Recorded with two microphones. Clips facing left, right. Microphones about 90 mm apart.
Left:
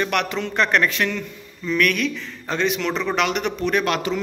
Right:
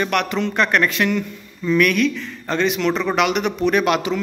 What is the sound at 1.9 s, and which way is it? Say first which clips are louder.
A man's voice: right 5 dB; centre (ahead or behind).